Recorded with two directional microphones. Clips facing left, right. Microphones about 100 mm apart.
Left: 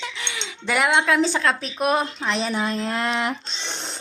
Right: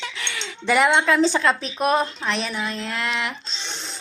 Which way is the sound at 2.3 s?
25° left (ahead or behind).